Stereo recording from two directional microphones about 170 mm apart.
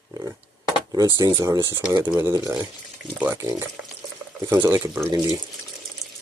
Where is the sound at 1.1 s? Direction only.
20° right (ahead or behind).